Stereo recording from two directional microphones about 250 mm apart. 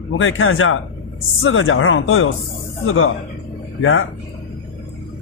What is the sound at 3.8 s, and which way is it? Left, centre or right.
Speech, left.